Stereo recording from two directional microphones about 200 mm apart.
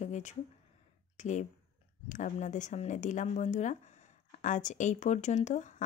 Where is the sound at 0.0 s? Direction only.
35° left (ahead or behind).